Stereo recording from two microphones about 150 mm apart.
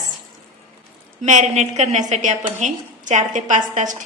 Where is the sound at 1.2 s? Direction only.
50° right (ahead or behind).